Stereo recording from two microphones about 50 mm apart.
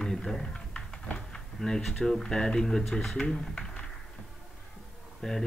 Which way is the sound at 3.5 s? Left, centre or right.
Centre.